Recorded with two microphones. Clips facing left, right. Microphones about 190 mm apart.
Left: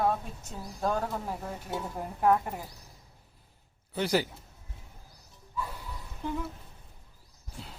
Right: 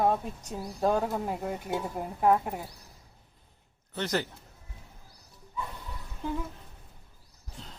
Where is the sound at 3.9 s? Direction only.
10° left (ahead or behind).